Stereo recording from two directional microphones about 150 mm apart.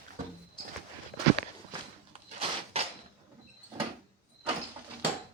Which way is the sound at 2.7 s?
40° right (ahead or behind).